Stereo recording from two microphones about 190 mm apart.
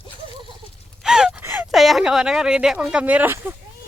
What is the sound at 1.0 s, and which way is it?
Speech, 5° right (ahead or behind).